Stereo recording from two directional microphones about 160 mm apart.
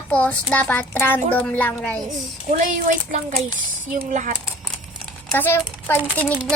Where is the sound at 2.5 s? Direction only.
55° right (ahead or behind).